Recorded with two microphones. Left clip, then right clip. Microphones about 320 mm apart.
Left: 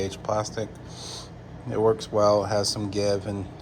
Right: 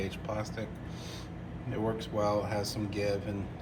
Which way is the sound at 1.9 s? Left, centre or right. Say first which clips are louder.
Left 10 dB; centre.